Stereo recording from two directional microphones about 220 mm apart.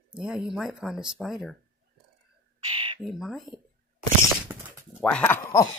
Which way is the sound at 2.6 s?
25° right (ahead or behind).